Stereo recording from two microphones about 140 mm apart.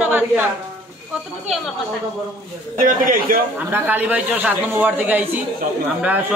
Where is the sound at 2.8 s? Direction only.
85° right.